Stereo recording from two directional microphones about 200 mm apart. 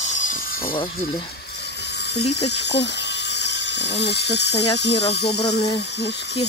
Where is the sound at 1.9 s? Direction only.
55° left (ahead or behind).